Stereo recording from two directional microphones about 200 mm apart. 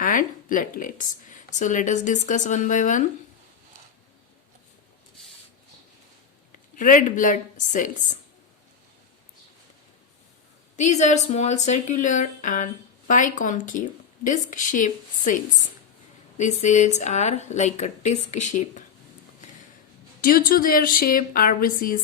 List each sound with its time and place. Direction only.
0.0 s speech: 40° left (ahead or behind)
6.7 s speech: 40° left (ahead or behind)
10.8 s speech: 35° left (ahead or behind)
20.2 s a woman's voice: 45° left (ahead or behind)